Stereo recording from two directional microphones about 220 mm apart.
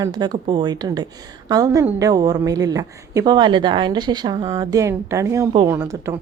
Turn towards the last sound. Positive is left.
turn(degrees=-10)  # may be behind; listen again after turning